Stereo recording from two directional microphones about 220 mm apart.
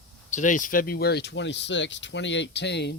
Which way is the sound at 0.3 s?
35° left (ahead or behind).